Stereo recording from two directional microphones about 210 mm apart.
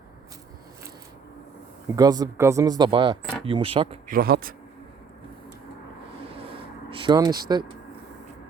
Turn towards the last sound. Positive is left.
turn(degrees=-20)  # may be behind; listen again after turning